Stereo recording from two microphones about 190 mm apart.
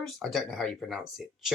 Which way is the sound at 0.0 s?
Centre (ahead or behind).